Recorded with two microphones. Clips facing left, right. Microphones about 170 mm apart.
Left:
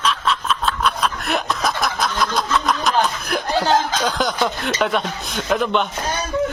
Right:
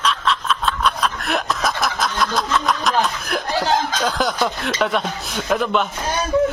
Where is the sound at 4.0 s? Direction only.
5° right (ahead or behind).